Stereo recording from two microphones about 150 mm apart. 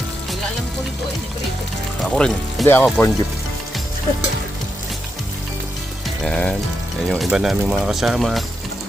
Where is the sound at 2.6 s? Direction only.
15° left (ahead or behind).